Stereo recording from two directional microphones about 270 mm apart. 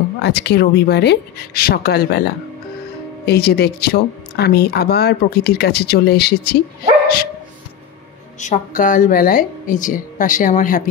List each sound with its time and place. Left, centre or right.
0.2 s speech: left
8.4 s a woman's voice: left